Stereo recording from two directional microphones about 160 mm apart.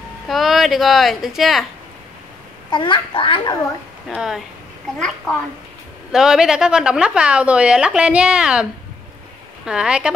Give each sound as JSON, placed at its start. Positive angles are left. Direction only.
{"t": 0.3, "sound": "a woman's voice", "side_deg": 0}
{"t": 2.7, "sound": "a child's voice", "side_deg": 30}
{"t": 4.1, "sound": "a woman's voice", "side_deg": -5}
{"t": 9.7, "sound": "a woman's voice", "side_deg": -5}